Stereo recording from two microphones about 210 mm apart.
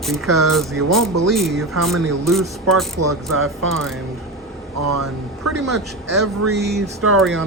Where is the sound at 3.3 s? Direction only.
80° right.